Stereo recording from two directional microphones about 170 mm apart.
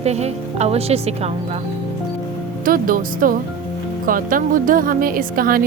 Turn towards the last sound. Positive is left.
turn(degrees=-55)  # may be behind; listen again after turning